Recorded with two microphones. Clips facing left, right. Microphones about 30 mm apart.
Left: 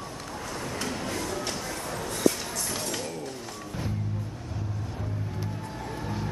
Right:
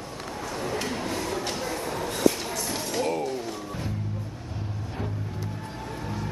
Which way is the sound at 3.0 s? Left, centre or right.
Right.